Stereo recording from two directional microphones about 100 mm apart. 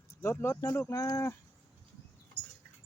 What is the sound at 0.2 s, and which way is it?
Speech, 25° left (ahead or behind).